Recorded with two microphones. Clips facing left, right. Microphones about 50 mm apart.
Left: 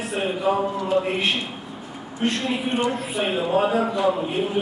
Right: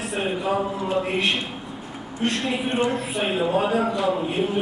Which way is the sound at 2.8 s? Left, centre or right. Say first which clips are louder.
Even; centre.